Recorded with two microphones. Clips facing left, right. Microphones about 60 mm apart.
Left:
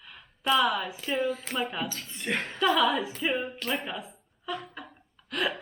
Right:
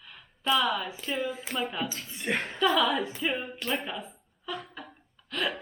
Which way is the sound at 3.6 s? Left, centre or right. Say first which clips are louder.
Even; centre.